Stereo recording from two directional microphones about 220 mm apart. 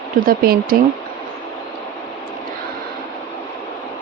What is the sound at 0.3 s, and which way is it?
Speech, 45° right (ahead or behind).